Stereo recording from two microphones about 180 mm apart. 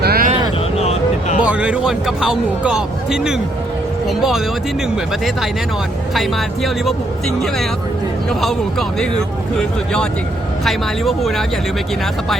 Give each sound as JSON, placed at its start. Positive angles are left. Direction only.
{"t": 0.0, "sound": "vehicle", "side_deg": -60}
{"t": 0.8, "sound": "a sound", "side_deg": 35}
{"t": 1.5, "sound": "speech", "side_deg": -5}
{"t": 6.1, "sound": "speech", "side_deg": 0}
{"t": 9.6, "sound": "speech", "side_deg": 5}